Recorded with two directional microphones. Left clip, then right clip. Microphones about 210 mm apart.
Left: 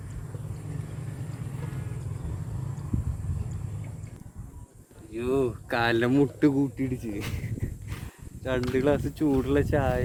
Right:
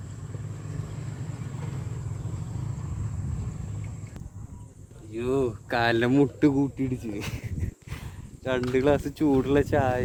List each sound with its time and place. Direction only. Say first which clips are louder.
5.1 s speech: even; 5° right (ahead or behind); by 10.0 s 35° right (ahead or behind)